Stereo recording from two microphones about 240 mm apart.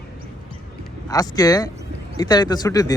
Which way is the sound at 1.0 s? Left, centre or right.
Centre.